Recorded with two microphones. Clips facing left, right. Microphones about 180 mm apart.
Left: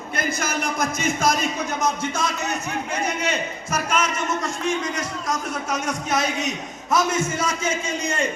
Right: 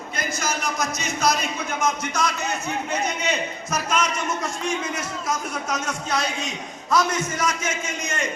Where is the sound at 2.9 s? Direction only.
10° left (ahead or behind).